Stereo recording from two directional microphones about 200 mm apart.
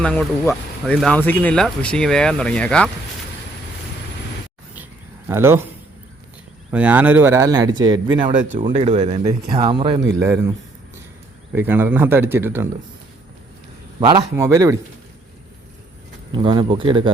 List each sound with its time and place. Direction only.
0.0 s speech: 5° left (ahead or behind)
5.3 s speech: 10° right (ahead or behind)
6.7 s speech: 5° right (ahead or behind); by 10.0 s 25° right (ahead or behind)
10.2 s speech: 15° right (ahead or behind)
11.5 s speech: 10° right (ahead or behind)
14.0 s speech: 20° right (ahead or behind)
16.3 s speech: 25° right (ahead or behind)